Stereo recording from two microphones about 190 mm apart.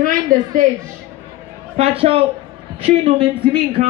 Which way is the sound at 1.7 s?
30° right (ahead or behind).